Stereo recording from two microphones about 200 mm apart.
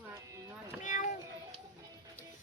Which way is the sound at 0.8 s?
40° left (ahead or behind).